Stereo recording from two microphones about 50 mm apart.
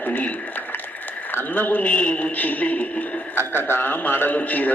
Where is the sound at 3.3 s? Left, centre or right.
Left.